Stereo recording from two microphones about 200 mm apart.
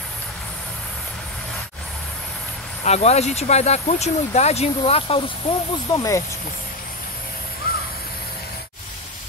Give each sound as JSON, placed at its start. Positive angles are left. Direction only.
{"t": 2.8, "sound": "speech", "side_deg": 35}
{"t": 5.9, "sound": "speech", "side_deg": 15}